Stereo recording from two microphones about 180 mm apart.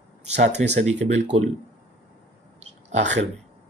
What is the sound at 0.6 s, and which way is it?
Speech, 40° right (ahead or behind).